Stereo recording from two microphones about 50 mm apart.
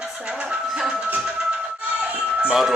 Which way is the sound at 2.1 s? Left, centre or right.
Right.